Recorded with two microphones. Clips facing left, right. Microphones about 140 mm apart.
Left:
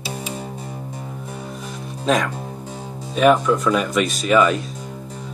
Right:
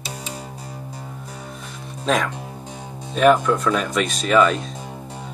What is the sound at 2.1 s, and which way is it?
Speech, centre (ahead or behind).